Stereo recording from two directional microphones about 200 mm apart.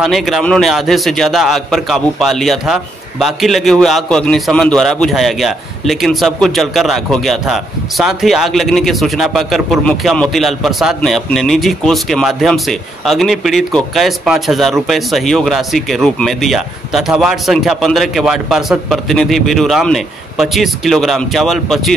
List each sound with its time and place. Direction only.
0.0 s a man's voice: centre (ahead or behind)